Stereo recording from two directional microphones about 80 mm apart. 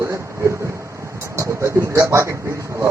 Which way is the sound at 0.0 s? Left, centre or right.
Right.